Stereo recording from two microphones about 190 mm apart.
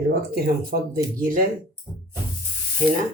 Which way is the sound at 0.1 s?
55° right (ahead or behind).